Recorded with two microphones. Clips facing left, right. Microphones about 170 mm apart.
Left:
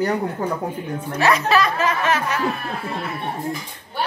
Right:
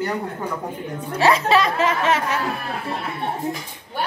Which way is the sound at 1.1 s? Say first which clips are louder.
Right 1 dB; 25° right (ahead or behind).